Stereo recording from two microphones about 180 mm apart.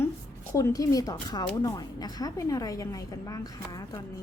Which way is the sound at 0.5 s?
20° left (ahead or behind).